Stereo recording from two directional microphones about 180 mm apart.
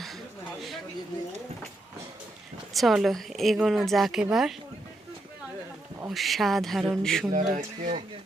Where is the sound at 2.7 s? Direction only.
Centre (ahead or behind).